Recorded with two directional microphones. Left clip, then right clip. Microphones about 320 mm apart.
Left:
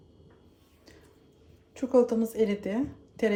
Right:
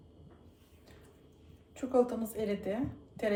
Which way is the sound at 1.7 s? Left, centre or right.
Left.